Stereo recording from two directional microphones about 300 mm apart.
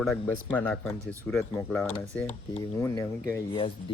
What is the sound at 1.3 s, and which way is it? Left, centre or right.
A child's voice, centre.